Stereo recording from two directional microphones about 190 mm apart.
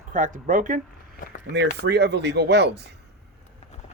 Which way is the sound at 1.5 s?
60° right (ahead or behind).